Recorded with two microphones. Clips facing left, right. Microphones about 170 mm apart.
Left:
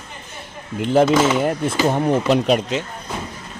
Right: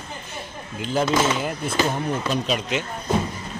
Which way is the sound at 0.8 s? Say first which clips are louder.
Left 7 dB; 65° left (ahead or behind).